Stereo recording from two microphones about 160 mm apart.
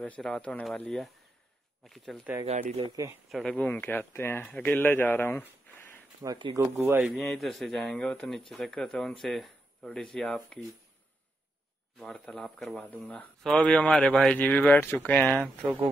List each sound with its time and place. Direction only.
0.0 s speech: 5° left (ahead or behind)
3.3 s speech: centre (ahead or behind)
6.2 s speech: 30° right (ahead or behind)
6.5 s speech: 15° right (ahead or behind)
7.1 s speech: centre (ahead or behind)
12.0 s speech: 5° left (ahead or behind)
15.6 s speech: 10° right (ahead or behind)